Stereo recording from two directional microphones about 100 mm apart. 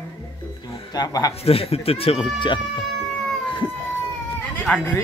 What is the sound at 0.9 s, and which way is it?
Speech, 40° left (ahead or behind).